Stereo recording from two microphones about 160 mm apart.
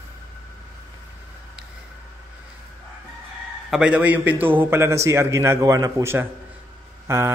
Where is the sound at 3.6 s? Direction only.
5° right (ahead or behind).